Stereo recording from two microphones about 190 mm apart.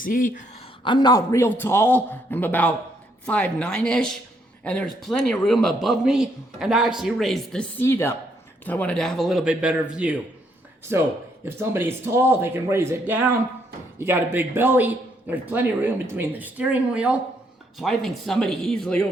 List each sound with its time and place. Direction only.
0.0 s speech: 45° left (ahead or behind)
0.9 s a man's voice: 20° left (ahead or behind); by 19.0 s 5° left (ahead or behind)